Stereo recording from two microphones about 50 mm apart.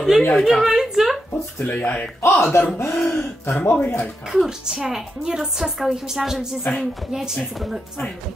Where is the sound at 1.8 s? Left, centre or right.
Left.